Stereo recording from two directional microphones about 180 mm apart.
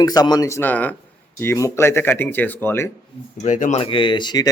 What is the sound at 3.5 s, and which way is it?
Speech, 45° left (ahead or behind).